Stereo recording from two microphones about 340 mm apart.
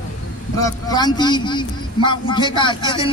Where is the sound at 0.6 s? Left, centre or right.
Centre.